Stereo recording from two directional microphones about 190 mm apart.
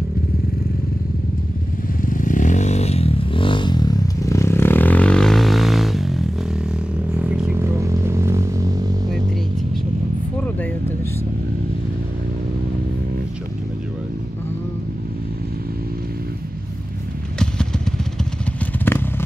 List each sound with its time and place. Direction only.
2.0 s vehicle: 45° left (ahead or behind); by 6.2 s centre (ahead or behind)
7.2 s music: 5° right (ahead or behind)
18.9 s vehicle: 10° left (ahead or behind)